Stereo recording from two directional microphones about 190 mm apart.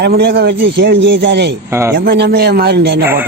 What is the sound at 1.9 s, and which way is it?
A man's voice, 55° right (ahead or behind).